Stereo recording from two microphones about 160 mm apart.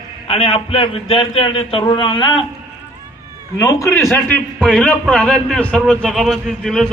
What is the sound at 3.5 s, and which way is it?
A man's voice, 20° left (ahead or behind).